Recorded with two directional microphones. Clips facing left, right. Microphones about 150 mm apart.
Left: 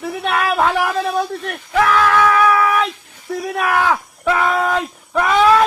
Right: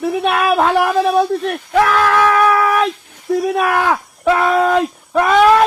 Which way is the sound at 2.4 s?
30° right (ahead or behind).